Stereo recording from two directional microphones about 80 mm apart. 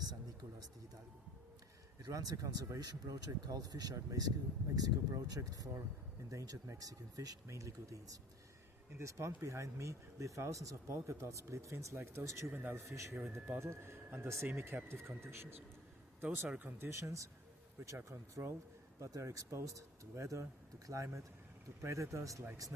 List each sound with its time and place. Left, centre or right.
2.0 s speech: right